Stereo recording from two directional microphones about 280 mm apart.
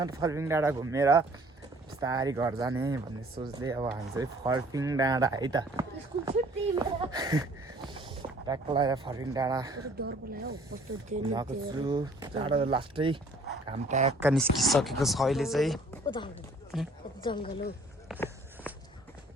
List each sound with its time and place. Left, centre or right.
0.0 s speech: centre
10.0 s speech: right
11.2 s speech: centre
14.2 s speech: centre
16.0 s speech: centre
16.7 s speech: centre
17.2 s speech: centre
18.1 s speech: centre
18.7 s walk: centre